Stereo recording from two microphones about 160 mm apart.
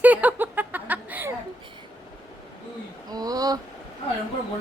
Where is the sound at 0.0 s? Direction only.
10° right (ahead or behind).